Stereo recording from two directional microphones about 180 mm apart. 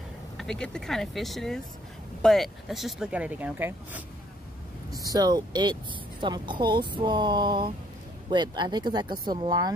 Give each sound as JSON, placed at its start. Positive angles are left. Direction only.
{"t": 0.4, "sound": "speech", "side_deg": 5}